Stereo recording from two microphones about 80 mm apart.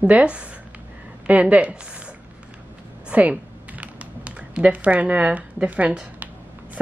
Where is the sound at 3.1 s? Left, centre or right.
Centre.